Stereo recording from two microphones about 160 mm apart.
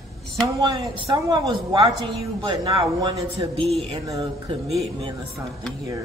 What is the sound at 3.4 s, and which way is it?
Speech, 35° right (ahead or behind).